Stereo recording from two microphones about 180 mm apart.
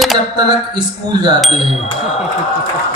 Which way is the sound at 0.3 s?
25° right (ahead or behind).